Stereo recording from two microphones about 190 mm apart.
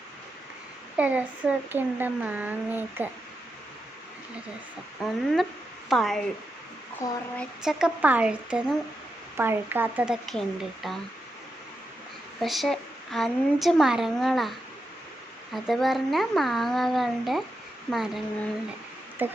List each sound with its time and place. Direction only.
0.9 s speech: 5° right (ahead or behind)
5.0 s speech: centre (ahead or behind)
7.0 s a sound: 15° left (ahead or behind)
7.3 s speech: 5° right (ahead or behind)
12.4 s speech: centre (ahead or behind)
15.5 s speech: centre (ahead or behind)
19.2 s speech: 10° right (ahead or behind)